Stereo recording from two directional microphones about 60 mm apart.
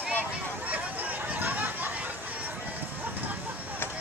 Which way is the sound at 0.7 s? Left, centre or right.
Right.